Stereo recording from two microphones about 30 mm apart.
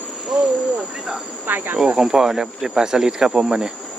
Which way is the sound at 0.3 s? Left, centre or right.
Centre.